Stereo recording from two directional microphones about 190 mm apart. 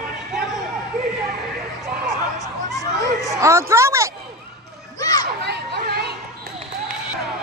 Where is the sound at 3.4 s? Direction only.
15° right (ahead or behind).